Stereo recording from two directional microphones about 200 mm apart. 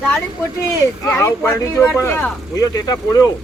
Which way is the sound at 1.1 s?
10° left (ahead or behind).